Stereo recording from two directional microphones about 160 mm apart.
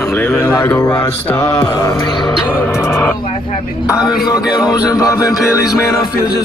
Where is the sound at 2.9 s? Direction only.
10° left (ahead or behind).